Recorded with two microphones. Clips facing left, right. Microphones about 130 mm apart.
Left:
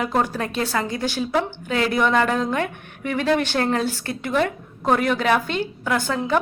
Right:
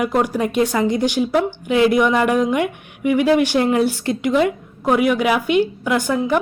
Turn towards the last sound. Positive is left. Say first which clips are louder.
# right 4 dB
turn(degrees=-15)  # may be behind; listen again after turning